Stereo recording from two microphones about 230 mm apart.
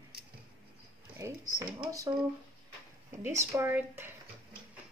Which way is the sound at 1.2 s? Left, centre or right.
Centre.